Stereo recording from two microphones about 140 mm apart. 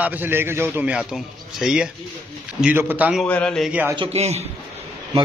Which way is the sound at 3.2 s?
10° left (ahead or behind).